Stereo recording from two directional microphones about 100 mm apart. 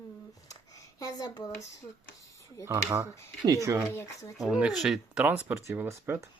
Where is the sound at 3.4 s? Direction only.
35° right (ahead or behind).